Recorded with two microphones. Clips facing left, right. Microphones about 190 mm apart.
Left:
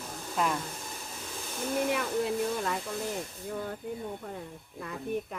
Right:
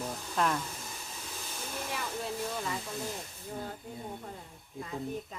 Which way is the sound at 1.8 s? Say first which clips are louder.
Left 5 dB; 60° left (ahead or behind).